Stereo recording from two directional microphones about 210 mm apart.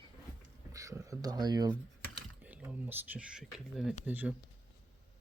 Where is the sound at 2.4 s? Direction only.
10° right (ahead or behind).